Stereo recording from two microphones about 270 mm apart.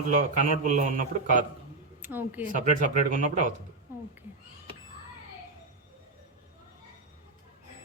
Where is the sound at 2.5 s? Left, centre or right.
Right.